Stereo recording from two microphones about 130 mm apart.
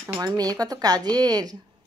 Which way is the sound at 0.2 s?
30° right (ahead or behind).